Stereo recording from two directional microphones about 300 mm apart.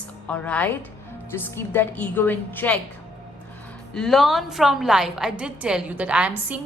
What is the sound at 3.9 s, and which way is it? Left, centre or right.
A woman's voice, centre.